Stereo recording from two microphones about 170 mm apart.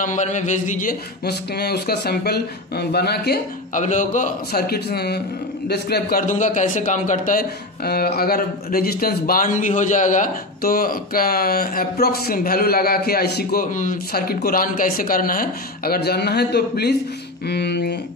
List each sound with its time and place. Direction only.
0.0 s speech: 45° left (ahead or behind); by 3.3 s 70° left (ahead or behind)
3.7 s a man's voice: 50° left (ahead or behind)
4.6 s a man's voice: 70° left (ahead or behind)